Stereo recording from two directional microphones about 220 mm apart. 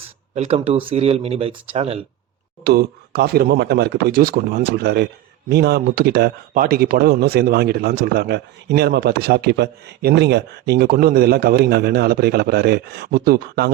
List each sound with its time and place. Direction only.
0.3 s speech: 30° right (ahead or behind)
2.6 s speech: 45° right (ahead or behind)